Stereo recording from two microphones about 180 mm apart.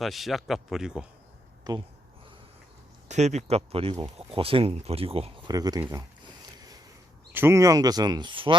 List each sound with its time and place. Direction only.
0.0 s speech: centre (ahead or behind)
1.7 s speech: 20° right (ahead or behind)
3.1 s speech: 40° right (ahead or behind)
5.5 s speech: 20° right (ahead or behind)
6.6 s a sound: 20° right (ahead or behind)
7.3 s speech: 15° right (ahead or behind)